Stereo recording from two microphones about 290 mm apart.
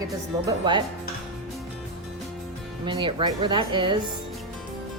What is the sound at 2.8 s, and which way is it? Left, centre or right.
A woman's voice, centre.